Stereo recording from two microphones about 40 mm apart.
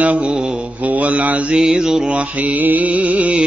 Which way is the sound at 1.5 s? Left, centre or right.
Centre.